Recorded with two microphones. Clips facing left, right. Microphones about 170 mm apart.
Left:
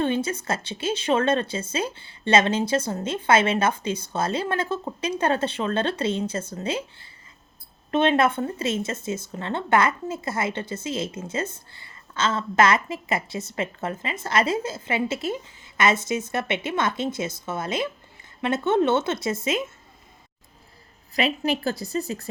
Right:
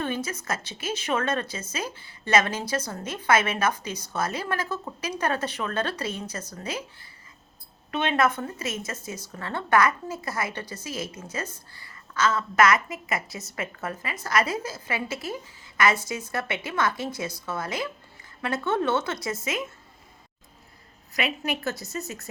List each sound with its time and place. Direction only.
0.0 s speech: 30° left (ahead or behind)
8.1 s speech: 30° left (ahead or behind)
21.1 s a woman's voice: 30° left (ahead or behind)